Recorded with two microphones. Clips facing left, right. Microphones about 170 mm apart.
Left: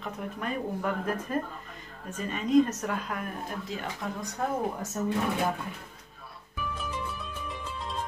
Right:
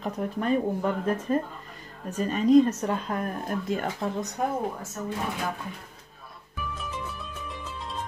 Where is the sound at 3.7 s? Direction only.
50° right (ahead or behind).